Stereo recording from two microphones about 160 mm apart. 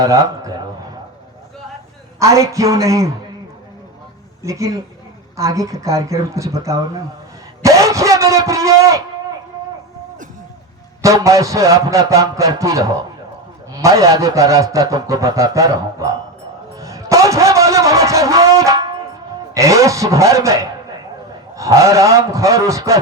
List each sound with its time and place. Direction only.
0.0 s a man's voice: 20° right (ahead or behind)
2.1 s a man's voice: 20° right (ahead or behind)
4.4 s a man's voice: 20° right (ahead or behind)
11.0 s a man's voice: 20° right (ahead or behind)
16.7 s music: 20° right (ahead or behind)
19.5 s a man's voice: 20° right (ahead or behind)